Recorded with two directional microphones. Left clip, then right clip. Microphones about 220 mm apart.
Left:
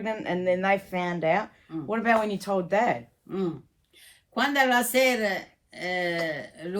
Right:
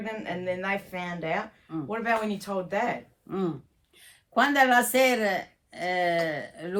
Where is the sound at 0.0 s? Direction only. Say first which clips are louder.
Left 5 dB; 30° left (ahead or behind).